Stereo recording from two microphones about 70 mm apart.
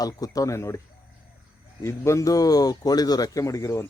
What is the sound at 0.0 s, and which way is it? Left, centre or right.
Speech, left.